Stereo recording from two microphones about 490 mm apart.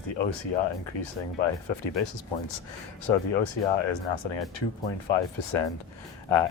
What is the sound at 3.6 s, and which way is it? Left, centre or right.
Speech, left.